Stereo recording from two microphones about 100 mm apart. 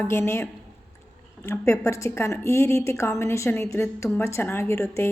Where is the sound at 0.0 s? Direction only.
25° left (ahead or behind).